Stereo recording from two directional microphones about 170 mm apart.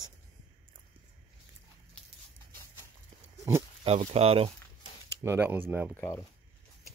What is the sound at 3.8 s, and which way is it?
Speech, 35° right (ahead or behind).